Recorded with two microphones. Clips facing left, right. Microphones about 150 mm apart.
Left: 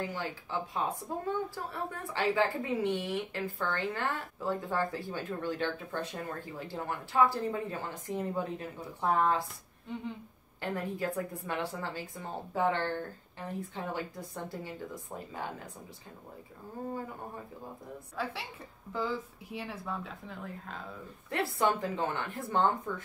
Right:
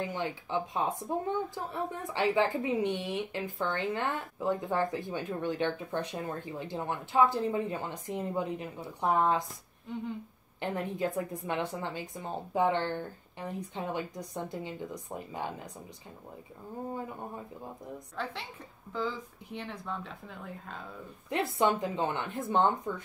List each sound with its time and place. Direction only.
0.0 s a woman's voice: 20° right (ahead or behind)
10.6 s a woman's voice: 20° right (ahead or behind)
18.1 s a woman's voice: 5° left (ahead or behind)
21.3 s a woman's voice: 20° right (ahead or behind)